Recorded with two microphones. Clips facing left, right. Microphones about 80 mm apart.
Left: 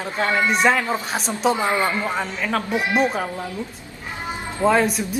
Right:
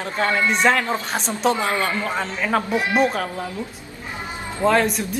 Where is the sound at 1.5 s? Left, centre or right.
Left.